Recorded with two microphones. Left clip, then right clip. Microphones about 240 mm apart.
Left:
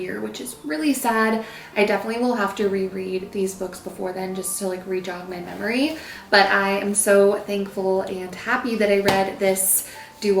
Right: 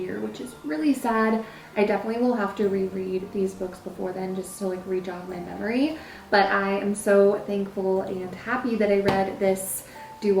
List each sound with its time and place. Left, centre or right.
0.1 s a woman's voice: centre
4.0 s speech: right
4.7 s a woman's voice: centre
7.8 s speech: right
8.0 s a woman's voice: centre